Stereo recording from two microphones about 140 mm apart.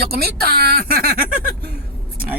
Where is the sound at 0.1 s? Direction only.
90° right.